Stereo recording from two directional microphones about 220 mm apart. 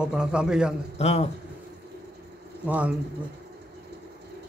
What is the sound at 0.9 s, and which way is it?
Speech, 30° left (ahead or behind).